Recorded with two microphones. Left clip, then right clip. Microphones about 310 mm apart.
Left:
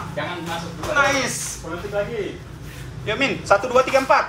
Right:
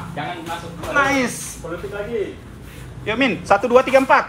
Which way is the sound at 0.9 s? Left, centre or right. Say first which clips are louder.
Right 1 dB; right.